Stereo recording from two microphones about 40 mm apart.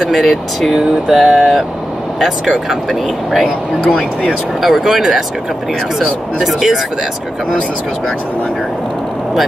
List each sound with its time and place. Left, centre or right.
0.0 s speech: centre
2.4 s speech: centre
2.9 s speech: centre